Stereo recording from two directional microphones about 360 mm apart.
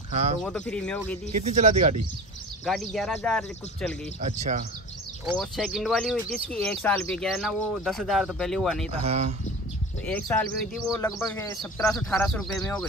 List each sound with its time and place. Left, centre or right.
0.1 s speech: centre
0.4 s speech: centre
1.3 s speech: centre
2.6 s speech: centre
4.2 s speech: centre
5.2 s speech: centre
8.8 s speech: centre
10.0 s speech: centre